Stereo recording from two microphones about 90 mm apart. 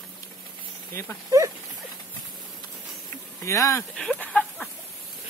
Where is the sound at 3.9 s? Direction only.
5° left (ahead or behind).